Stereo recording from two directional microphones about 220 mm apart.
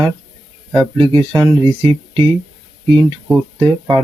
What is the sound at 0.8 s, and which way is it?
Speech, 25° right (ahead or behind).